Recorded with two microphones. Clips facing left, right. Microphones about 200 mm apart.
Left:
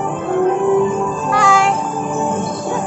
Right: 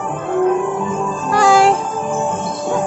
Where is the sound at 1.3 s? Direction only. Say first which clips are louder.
Right 4 dB; 35° right (ahead or behind).